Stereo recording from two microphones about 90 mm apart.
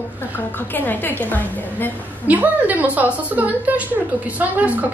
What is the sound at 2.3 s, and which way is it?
A woman's voice, 20° right (ahead or behind).